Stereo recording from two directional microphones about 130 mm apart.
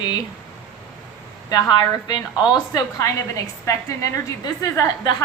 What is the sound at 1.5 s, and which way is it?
A woman's voice, 30° left (ahead or behind).